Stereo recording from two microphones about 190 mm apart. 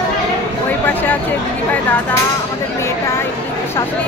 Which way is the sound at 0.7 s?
10° left (ahead or behind).